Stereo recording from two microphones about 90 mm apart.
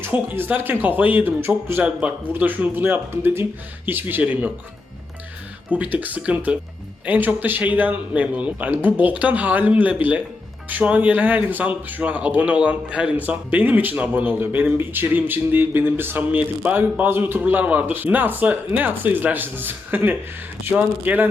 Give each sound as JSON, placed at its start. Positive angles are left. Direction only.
{"t": 0.0, "sound": "speech", "side_deg": -20}
{"t": 1.8, "sound": "speech", "side_deg": -15}
{"t": 5.7, "sound": "speech", "side_deg": -15}